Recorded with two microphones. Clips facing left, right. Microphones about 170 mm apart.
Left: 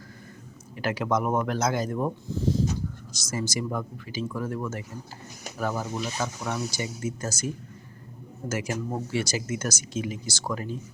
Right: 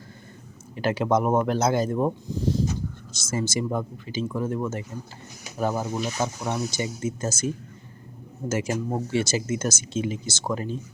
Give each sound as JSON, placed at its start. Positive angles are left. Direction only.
{"t": 0.8, "sound": "speech", "side_deg": -25}